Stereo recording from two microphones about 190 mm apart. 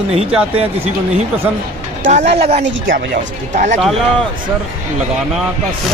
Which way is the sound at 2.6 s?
50° right (ahead or behind).